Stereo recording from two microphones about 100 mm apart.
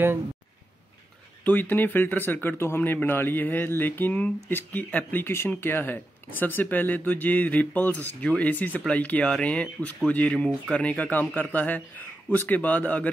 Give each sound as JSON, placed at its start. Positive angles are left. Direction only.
{"t": 1.4, "sound": "a man's voice", "side_deg": 20}